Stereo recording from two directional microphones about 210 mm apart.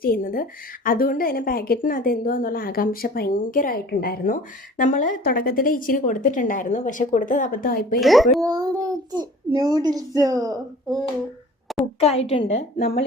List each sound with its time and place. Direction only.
0.0 s a woman's voice: 45° left (ahead or behind)
7.9 s speech: centre (ahead or behind)
8.4 s a child's voice: 20° right (ahead or behind)
11.9 s a woman's voice: 30° left (ahead or behind)
12.5 s a woman's voice: 50° left (ahead or behind)